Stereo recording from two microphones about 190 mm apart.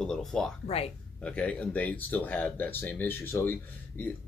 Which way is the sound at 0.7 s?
30° left (ahead or behind).